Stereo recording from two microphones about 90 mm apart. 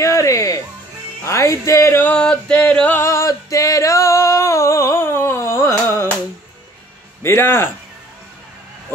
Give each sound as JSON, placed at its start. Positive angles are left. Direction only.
{"t": 0.0, "sound": "music", "side_deg": 35}
{"t": 2.0, "sound": "a sound", "side_deg": 10}
{"t": 3.0, "sound": "singing", "side_deg": 35}
{"t": 7.2, "sound": "a man's voice", "side_deg": 25}